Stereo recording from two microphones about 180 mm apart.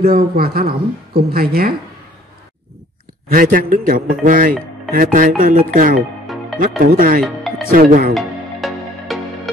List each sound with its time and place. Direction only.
0.0 s a woman's voice: 55° right (ahead or behind)
3.3 s speech: 50° right (ahead or behind)
7.2 s music: centre (ahead or behind)
7.7 s speech: 50° right (ahead or behind)
8.1 s music: centre (ahead or behind)